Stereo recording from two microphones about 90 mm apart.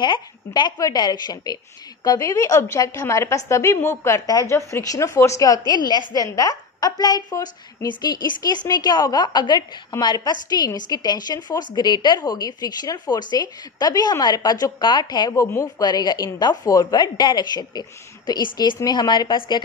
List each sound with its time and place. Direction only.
0.7 s a woman's voice: 45° left (ahead or behind)
15.3 s a woman's voice: 35° left (ahead or behind)
15.8 s a woman's voice: 50° left (ahead or behind)